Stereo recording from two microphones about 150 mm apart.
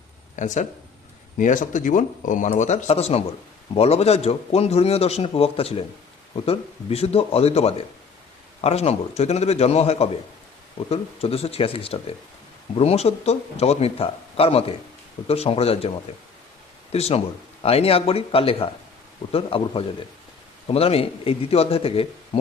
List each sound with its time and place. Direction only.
0.3 s a man's voice: 55° left (ahead or behind)
16.9 s a man's voice: 45° left (ahead or behind)